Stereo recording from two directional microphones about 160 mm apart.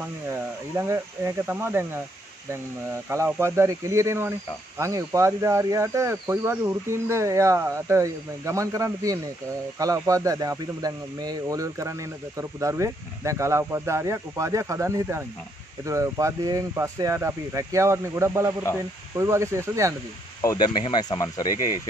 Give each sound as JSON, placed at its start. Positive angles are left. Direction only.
{"t": 0.3, "sound": "speech", "side_deg": -15}
{"t": 3.1, "sound": "speech", "side_deg": -15}
{"t": 20.4, "sound": "speech", "side_deg": 25}